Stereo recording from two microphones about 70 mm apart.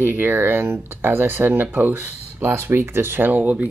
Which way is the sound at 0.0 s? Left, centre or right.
Right.